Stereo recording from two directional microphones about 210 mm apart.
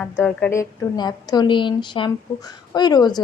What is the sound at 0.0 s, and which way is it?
A woman's voice, 5° left (ahead or behind).